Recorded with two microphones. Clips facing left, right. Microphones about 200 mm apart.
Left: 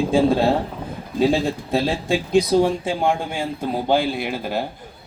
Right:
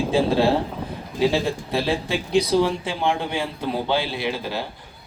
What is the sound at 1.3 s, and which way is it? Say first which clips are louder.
Speech: left 3 dB; 45° left (ahead or behind).